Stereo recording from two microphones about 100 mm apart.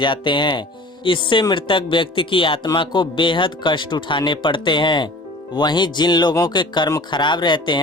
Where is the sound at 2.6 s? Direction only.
45° left (ahead or behind).